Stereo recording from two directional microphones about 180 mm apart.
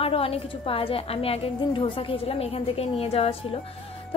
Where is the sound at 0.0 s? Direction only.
30° left (ahead or behind).